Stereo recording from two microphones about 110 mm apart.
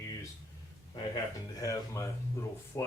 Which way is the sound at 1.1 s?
30° left (ahead or behind).